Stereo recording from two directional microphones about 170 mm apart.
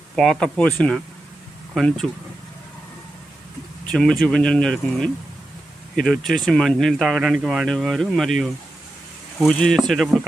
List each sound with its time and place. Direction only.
0.2 s speech: 5° left (ahead or behind)
3.9 s speech: 5° left (ahead or behind)
9.5 s speech: 5° left (ahead or behind)